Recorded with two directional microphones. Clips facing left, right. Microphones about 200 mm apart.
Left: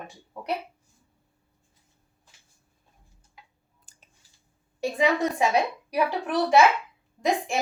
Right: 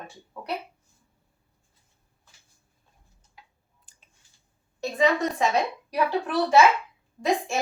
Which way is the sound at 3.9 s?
45° left (ahead or behind).